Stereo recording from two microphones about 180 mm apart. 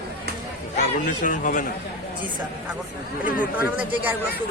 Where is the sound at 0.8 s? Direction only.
45° left (ahead or behind).